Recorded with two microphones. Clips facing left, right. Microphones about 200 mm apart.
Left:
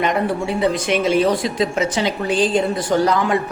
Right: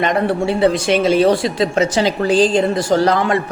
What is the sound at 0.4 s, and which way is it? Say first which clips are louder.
Speech: right 4 dB; 30° right (ahead or behind).